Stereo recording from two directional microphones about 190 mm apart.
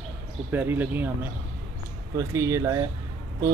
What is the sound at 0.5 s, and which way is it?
Speech, 10° right (ahead or behind).